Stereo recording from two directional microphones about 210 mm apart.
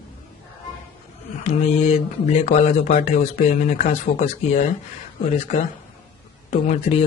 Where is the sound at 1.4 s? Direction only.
30° left (ahead or behind).